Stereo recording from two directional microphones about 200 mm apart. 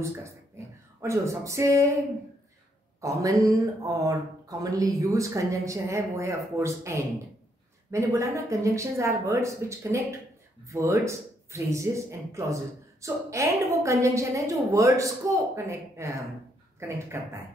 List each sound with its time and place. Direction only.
1.0 s speech: 15° right (ahead or behind)
3.0 s speech: 15° right (ahead or behind)